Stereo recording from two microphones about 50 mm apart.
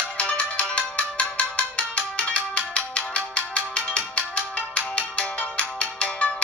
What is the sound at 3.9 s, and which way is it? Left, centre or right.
Music, left.